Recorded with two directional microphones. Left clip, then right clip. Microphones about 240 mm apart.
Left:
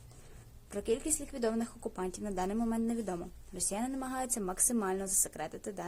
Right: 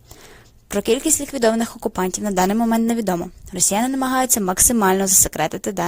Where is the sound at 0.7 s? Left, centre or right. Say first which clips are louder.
Right 15 dB; right.